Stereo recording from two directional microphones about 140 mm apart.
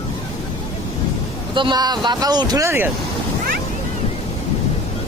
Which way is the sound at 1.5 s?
35° right (ahead or behind).